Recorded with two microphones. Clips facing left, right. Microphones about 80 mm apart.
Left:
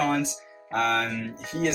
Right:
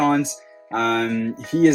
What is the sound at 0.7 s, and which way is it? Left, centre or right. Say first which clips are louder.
Music: right 4 dB; right.